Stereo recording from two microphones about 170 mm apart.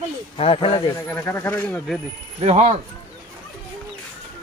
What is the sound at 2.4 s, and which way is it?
Speech, 40° right (ahead or behind).